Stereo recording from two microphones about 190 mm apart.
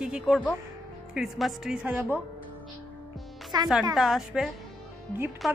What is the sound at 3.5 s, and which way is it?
Speech, 20° right (ahead or behind).